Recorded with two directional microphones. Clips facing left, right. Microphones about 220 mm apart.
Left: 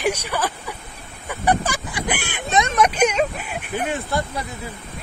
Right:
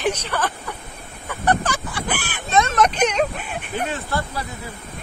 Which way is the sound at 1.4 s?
10° left (ahead or behind).